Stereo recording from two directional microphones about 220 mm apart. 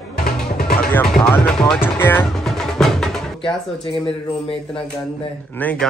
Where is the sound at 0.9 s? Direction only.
5° left (ahead or behind).